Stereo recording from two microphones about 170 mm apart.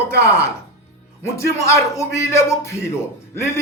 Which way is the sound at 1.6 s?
15° left (ahead or behind).